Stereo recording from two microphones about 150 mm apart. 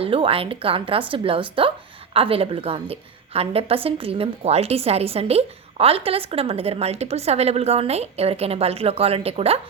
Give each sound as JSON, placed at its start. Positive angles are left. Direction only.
{"t": 0.0, "sound": "a woman's voice", "side_deg": -40}